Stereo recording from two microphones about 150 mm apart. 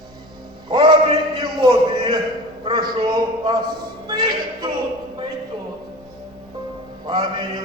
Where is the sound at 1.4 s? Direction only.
30° right (ahead or behind).